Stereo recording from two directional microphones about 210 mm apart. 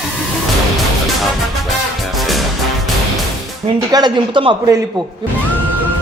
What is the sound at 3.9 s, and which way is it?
Speech, 20° right (ahead or behind).